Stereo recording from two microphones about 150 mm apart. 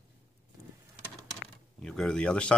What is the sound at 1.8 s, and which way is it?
Speech, 5° left (ahead or behind).